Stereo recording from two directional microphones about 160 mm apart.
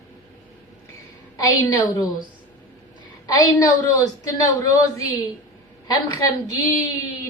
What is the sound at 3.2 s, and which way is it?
A woman's voice, 20° left (ahead or behind).